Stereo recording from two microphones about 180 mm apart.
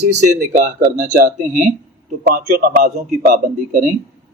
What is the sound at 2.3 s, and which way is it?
A man's voice, 55° right (ahead or behind).